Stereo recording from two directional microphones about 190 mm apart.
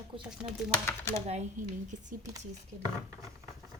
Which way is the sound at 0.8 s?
15° left (ahead or behind).